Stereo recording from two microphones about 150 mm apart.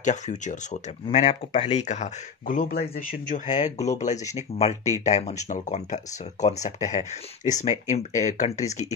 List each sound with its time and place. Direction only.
0.0 s speech: 55° left (ahead or behind)